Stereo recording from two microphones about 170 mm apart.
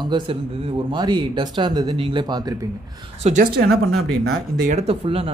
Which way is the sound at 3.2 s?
40° right (ahead or behind).